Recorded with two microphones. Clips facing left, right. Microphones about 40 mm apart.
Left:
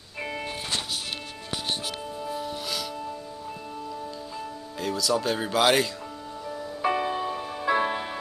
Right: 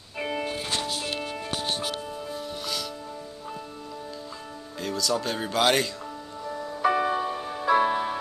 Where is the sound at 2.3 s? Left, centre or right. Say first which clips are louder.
Left 1 dB; centre.